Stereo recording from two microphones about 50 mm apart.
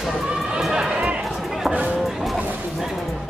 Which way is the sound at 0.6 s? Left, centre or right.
Centre.